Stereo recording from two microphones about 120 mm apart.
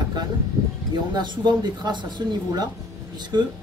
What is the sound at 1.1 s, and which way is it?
Speech, 35° right (ahead or behind).